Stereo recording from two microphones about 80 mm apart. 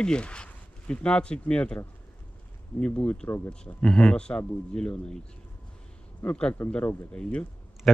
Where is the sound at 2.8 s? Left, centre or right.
Centre.